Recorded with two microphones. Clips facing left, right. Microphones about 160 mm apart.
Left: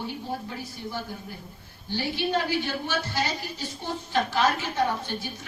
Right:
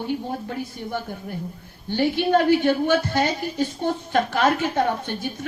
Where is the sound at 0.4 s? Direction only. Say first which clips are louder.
Right 6 dB; 55° right (ahead or behind).